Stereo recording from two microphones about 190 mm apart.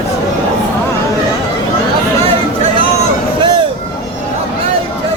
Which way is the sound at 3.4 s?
25° right (ahead or behind).